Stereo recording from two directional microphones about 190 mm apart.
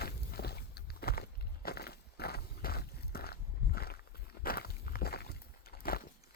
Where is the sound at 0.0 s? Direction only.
55° left (ahead or behind).